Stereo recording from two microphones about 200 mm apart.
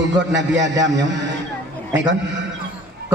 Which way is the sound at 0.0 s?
65° right (ahead or behind).